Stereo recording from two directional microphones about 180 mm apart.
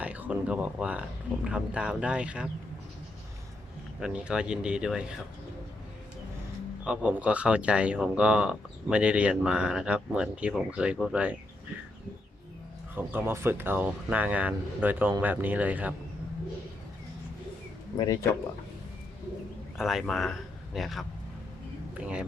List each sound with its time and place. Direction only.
0.0 s a sound: 5° right (ahead or behind)
1.5 s speech: 5° right (ahead or behind)
4.0 s speech: 5° right (ahead or behind)
6.8 s speech: 5° right (ahead or behind)
12.9 s speech: 10° right (ahead or behind)
17.9 s speech: 20° left (ahead or behind)
19.7 s speech: centre (ahead or behind)